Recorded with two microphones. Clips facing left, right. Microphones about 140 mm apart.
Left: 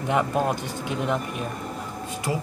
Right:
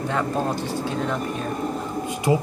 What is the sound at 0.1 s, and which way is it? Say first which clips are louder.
Speech: left 3 dB; 15° left (ahead or behind).